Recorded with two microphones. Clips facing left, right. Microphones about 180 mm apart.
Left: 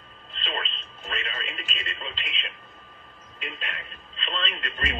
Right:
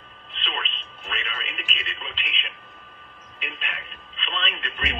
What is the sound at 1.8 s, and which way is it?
Speech, 40° left (ahead or behind).